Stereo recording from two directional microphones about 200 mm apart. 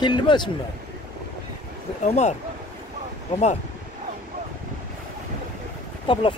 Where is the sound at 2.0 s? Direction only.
35° left (ahead or behind).